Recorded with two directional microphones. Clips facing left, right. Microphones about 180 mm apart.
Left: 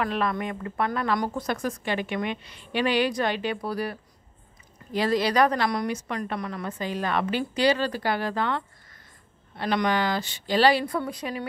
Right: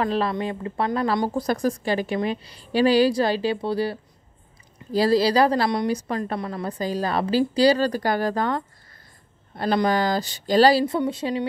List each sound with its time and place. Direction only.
0.0 s speech: 30° right (ahead or behind)